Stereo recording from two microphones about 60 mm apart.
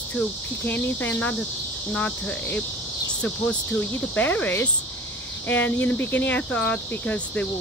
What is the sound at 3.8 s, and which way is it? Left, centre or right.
Cricket, left.